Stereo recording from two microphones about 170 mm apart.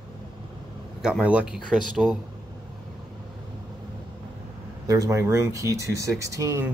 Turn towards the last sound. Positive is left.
turn(degrees=-20)  # may be behind; listen again after turning